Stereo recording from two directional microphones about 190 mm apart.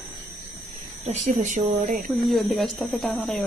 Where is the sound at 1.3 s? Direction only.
40° right (ahead or behind).